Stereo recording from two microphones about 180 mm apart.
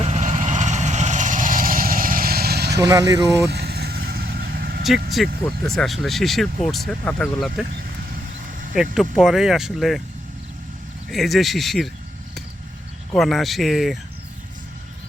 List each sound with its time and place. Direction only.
0.0 s vehicle: 40° right (ahead or behind); by 2.8 s 65° right (ahead or behind)
2.8 s speech: 20° right (ahead or behind)
3.5 s vehicle: 65° right (ahead or behind)
5.5 s speech: centre (ahead or behind)
8.7 s speech: centre (ahead or behind)
11.1 s speech: centre (ahead or behind)
13.1 s speech: centre (ahead or behind)